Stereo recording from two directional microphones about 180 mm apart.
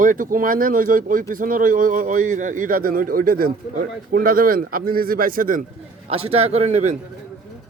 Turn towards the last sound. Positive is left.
turn(degrees=-40)  # may be behind; listen again after turning